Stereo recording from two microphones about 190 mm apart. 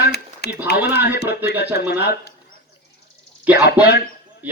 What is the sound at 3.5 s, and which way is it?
Speech, 60° left (ahead or behind).